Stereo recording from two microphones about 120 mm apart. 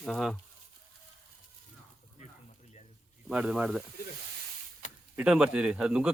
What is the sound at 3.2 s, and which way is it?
Speech, 5° right (ahead or behind).